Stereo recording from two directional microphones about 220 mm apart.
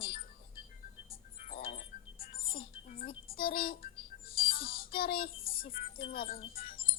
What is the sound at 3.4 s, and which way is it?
Speech, 40° left (ahead or behind).